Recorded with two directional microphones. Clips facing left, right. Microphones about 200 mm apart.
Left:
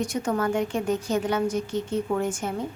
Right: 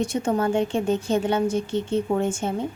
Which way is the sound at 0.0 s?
25° right (ahead or behind).